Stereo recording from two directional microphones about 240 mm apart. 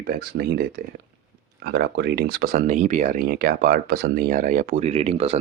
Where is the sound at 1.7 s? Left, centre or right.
Right.